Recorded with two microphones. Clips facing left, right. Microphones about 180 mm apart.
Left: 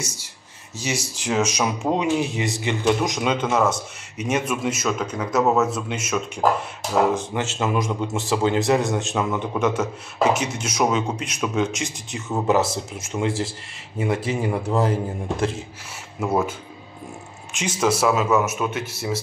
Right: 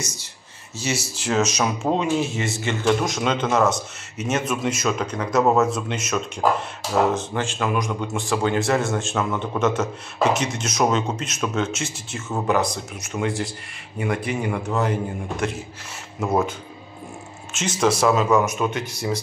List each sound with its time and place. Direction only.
0.0 s speech: 10° left (ahead or behind)
7.4 s a man's voice: 20° left (ahead or behind)
13.0 s a man's voice: 25° left (ahead or behind)
16.2 s speech: 10° left (ahead or behind)
17.5 s speech: 10° left (ahead or behind)